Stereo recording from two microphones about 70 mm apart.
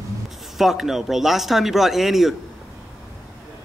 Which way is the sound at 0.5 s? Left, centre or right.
Centre.